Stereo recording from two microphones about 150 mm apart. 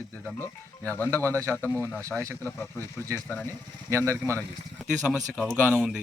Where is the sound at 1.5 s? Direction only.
10° left (ahead or behind).